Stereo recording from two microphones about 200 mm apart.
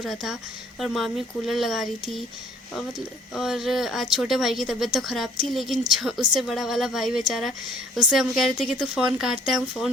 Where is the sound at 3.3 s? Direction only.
Centre (ahead or behind).